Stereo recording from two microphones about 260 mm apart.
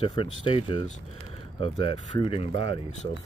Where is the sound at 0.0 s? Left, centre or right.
Centre.